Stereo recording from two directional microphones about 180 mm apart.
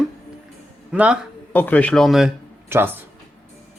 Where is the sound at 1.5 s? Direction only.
10° left (ahead or behind).